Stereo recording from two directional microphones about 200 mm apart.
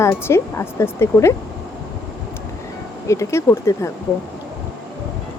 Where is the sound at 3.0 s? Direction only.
15° left (ahead or behind).